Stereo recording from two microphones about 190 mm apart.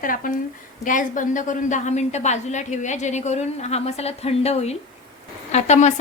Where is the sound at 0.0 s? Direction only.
45° left (ahead or behind).